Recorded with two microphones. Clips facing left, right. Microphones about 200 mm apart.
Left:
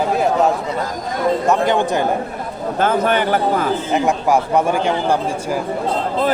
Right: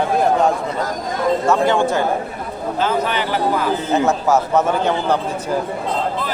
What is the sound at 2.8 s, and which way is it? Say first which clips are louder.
Speech: left 4 dB; 50° left (ahead or behind).